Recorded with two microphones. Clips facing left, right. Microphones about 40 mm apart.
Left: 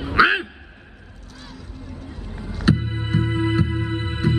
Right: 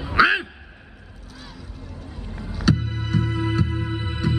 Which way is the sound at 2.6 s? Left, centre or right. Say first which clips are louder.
Left 2 dB; centre.